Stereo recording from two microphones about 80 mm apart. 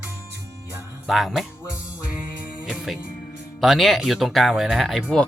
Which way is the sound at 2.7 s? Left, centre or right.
Centre.